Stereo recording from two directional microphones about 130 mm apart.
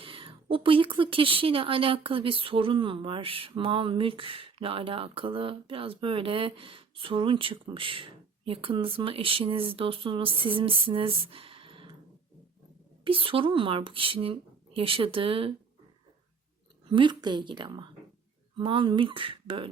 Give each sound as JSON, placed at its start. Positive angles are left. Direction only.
{"t": 0.0, "sound": "speech", "side_deg": -45}
{"t": 13.1, "sound": "speech", "side_deg": -45}
{"t": 16.9, "sound": "speech", "side_deg": -35}